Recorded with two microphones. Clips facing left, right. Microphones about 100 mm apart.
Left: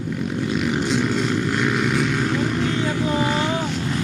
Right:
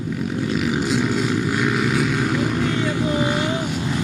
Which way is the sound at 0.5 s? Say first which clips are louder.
Even; centre (ahead or behind).